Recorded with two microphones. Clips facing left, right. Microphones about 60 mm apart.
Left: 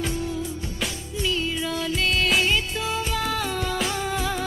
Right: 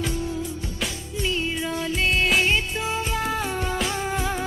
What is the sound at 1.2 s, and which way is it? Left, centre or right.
Music, right.